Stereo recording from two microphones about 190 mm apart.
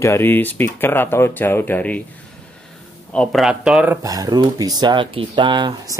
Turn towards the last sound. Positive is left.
turn(degrees=-20)  # may be behind; listen again after turning